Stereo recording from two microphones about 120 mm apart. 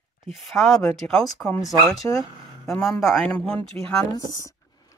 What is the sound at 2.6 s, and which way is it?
Speech, centre (ahead or behind).